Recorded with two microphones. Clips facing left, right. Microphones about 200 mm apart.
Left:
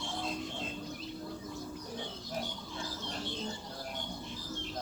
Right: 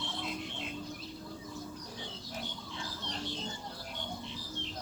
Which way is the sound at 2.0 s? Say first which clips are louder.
Left 5 dB; 55° left (ahead or behind).